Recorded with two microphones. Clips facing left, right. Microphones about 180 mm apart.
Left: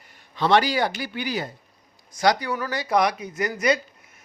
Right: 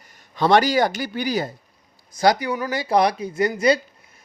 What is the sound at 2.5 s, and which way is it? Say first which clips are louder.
Speech: right 3 dB; 20° right (ahead or behind).